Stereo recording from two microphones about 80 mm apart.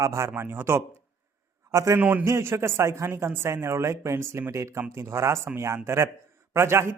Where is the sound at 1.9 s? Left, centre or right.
Right.